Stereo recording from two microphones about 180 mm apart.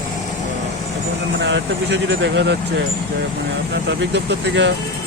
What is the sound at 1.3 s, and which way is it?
Speech, 75° right (ahead or behind).